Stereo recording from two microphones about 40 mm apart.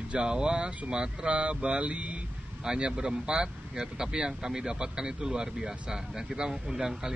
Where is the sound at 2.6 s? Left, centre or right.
Right.